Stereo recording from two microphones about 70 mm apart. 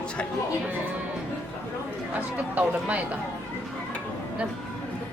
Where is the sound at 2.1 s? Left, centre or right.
Right.